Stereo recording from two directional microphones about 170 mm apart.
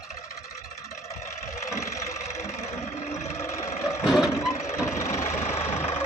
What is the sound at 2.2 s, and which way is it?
Vehicle, 40° left (ahead or behind).